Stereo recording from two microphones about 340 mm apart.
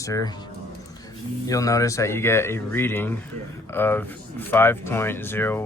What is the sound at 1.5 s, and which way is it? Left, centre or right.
Speech, centre.